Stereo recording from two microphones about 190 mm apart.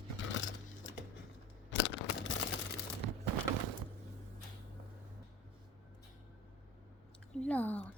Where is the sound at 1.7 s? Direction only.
70° left (ahead or behind).